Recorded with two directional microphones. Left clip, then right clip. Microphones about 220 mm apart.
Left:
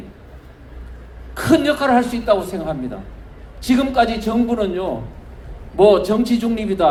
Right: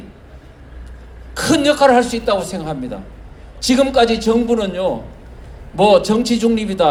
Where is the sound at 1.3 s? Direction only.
45° right (ahead or behind).